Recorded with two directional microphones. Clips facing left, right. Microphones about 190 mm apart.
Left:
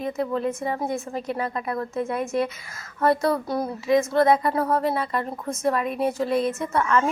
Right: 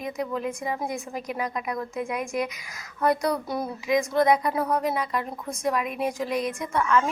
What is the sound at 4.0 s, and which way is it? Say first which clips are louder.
A woman's voice: left 2 dB; 15° right (ahead or behind).